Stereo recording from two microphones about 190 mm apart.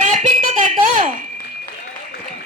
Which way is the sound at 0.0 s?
35° right (ahead or behind).